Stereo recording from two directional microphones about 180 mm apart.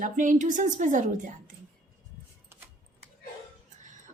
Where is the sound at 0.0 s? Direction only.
45° right (ahead or behind).